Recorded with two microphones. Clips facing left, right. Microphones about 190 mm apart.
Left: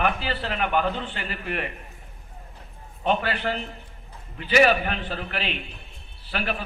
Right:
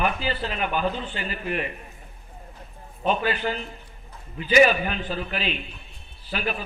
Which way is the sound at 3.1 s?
70° left (ahead or behind).